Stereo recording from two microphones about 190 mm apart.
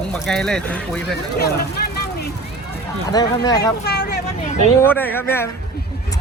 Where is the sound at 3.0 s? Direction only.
20° left (ahead or behind).